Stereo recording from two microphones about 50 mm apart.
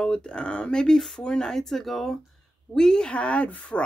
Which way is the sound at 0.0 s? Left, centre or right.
Centre.